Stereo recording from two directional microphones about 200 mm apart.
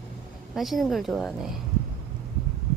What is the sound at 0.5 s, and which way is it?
Speech, centre (ahead or behind).